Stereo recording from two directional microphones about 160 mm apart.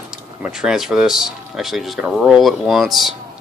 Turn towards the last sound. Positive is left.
turn(degrees=0)  # may be behind; listen again after turning